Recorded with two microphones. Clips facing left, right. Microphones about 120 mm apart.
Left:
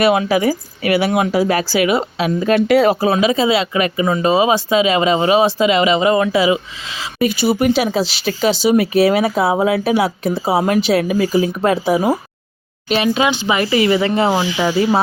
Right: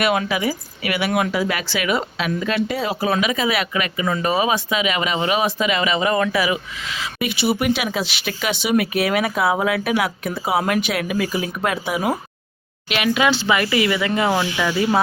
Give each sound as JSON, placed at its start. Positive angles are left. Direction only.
{"t": 0.0, "sound": "speech", "side_deg": 30}
{"t": 2.6, "sound": "speech", "side_deg": 75}
{"t": 3.0, "sound": "speech", "side_deg": 30}
{"t": 13.1, "sound": "speech", "side_deg": 20}
{"t": 13.6, "sound": "speech", "side_deg": 30}